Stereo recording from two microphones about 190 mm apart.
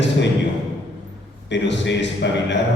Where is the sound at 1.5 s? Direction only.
70° left (ahead or behind).